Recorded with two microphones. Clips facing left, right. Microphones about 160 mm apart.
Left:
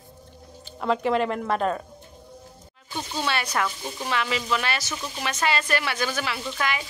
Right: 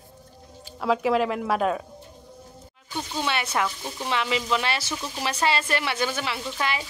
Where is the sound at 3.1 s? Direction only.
20° right (ahead or behind).